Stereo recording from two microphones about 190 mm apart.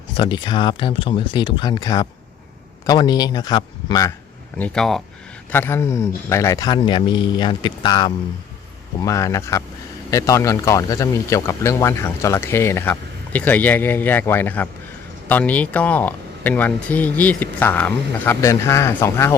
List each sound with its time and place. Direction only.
0.1 s a man's voice: 25° left (ahead or behind)
4.5 s a man's voice: 5° left (ahead or behind)